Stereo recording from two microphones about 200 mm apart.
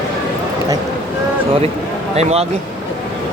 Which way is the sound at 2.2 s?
35° right (ahead or behind).